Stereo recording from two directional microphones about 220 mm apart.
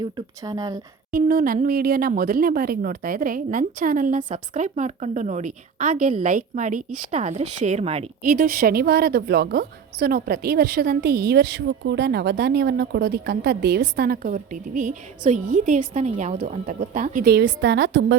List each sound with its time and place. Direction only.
0.0 s speech: 15° right (ahead or behind)
1.1 s a woman's voice: 40° right (ahead or behind)